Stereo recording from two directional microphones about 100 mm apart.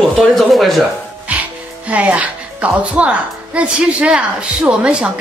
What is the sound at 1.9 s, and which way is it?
A woman's voice, 15° right (ahead or behind).